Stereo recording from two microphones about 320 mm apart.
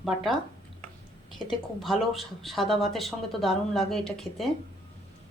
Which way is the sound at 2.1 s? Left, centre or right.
Centre.